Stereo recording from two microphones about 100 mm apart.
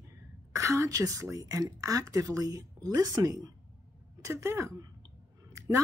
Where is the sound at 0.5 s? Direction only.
30° right (ahead or behind).